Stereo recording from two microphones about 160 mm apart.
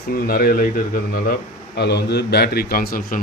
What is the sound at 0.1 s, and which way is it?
Speech, 70° left (ahead or behind).